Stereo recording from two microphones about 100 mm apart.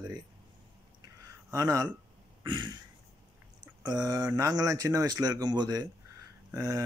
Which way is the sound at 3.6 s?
45° right (ahead or behind).